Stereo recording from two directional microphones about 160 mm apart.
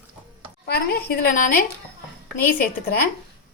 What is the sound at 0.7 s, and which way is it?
Speech, 70° left (ahead or behind).